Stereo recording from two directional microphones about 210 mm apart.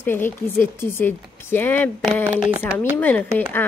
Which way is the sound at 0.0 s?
10° left (ahead or behind).